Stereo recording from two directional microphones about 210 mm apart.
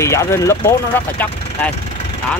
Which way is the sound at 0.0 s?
15° left (ahead or behind).